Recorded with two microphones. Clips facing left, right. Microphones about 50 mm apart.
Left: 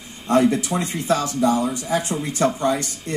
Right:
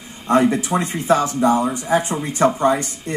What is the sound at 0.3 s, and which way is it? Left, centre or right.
Speech, right.